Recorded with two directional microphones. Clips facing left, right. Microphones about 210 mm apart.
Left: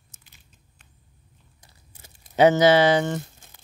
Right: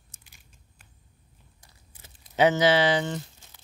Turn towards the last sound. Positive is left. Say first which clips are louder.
# left 5 dB
turn(degrees=50)  # may be behind; listen again after turning